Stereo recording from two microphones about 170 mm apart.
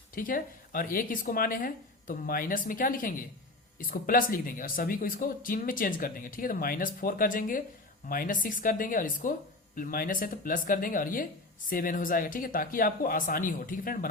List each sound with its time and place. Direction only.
0.1 s speech: 55° left (ahead or behind)